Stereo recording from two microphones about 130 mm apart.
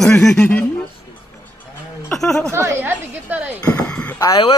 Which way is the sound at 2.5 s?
15° right (ahead or behind).